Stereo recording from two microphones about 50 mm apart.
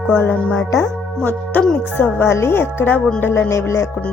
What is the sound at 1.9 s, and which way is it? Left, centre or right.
Speech, left.